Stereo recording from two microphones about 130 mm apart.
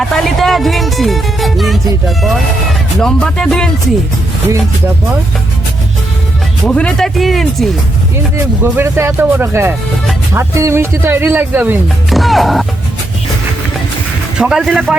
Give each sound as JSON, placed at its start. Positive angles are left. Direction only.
{"t": 0.0, "sound": "speech", "side_deg": 0}
{"t": 6.7, "sound": "speech", "side_deg": 5}
{"t": 8.6, "sound": "speech", "side_deg": -20}
{"t": 12.1, "sound": "speech", "side_deg": 0}
{"t": 14.3, "sound": "speech", "side_deg": -5}